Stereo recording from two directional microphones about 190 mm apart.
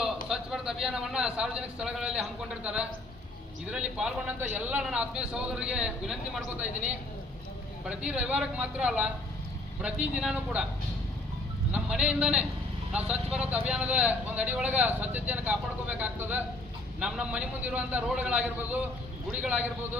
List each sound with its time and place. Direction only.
0.3 s a man's voice: centre (ahead or behind)
7.9 s a man's voice: 5° right (ahead or behind)
11.7 s a man's voice: 5° right (ahead or behind)